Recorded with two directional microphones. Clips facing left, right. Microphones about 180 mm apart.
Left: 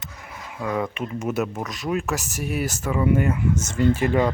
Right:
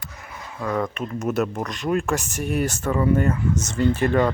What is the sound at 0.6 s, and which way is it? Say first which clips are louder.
Speech: right 1 dB; 10° left (ahead or behind).